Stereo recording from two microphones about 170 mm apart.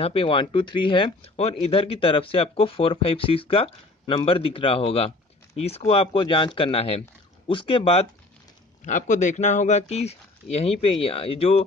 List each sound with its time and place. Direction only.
0.0 s speech: 35° left (ahead or behind)
8.8 s speech: 45° left (ahead or behind)